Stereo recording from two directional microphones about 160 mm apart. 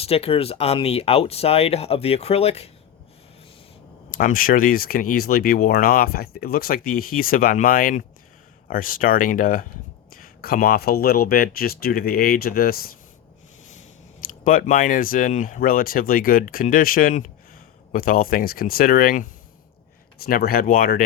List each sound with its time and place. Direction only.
0.0 s speech: 40° left (ahead or behind)
4.1 s speech: 60° left (ahead or behind)
14.4 s speech: 55° left (ahead or behind)